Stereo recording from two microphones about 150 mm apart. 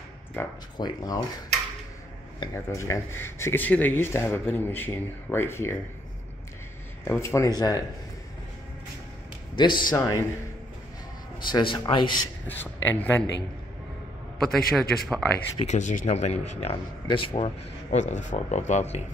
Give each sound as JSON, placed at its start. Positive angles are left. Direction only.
{"t": 0.4, "sound": "speech", "side_deg": 15}
{"t": 0.7, "sound": "speech", "side_deg": 25}
{"t": 2.5, "sound": "speech", "side_deg": 20}
{"t": 7.1, "sound": "speech", "side_deg": 20}
{"t": 9.6, "sound": "speech", "side_deg": 30}
{"t": 11.4, "sound": "speech", "side_deg": 30}
{"t": 12.4, "sound": "speech", "side_deg": 10}
{"t": 14.8, "sound": "speech", "side_deg": 0}
{"t": 15.6, "sound": "speech", "side_deg": 50}